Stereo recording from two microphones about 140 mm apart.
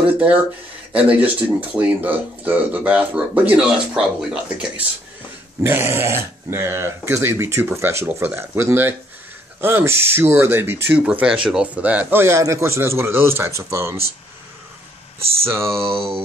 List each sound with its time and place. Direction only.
0.9 s speech: 10° right (ahead or behind)
15.4 s speech: 20° right (ahead or behind)
15.8 s a sound: 40° right (ahead or behind)